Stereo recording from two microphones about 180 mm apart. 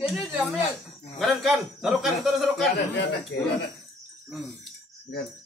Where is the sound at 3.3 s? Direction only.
75° left (ahead or behind).